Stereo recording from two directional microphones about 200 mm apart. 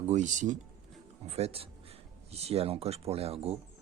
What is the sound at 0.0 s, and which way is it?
Speech, 35° right (ahead or behind).